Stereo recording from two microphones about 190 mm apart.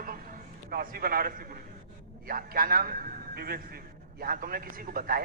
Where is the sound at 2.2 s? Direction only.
50° right (ahead or behind).